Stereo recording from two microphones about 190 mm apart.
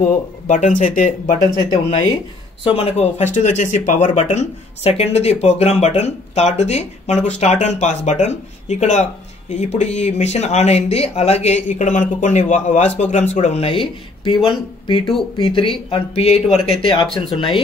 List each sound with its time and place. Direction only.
0.5 s speech: 40° left (ahead or behind)
2.6 s speech: 30° left (ahead or behind)